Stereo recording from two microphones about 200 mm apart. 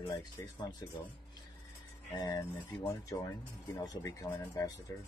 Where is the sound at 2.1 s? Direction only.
20° left (ahead or behind).